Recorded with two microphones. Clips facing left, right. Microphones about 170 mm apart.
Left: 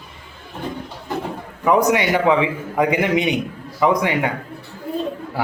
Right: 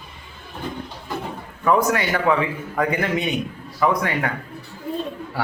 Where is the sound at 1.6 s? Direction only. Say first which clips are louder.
Left 3 dB; 15° left (ahead or behind).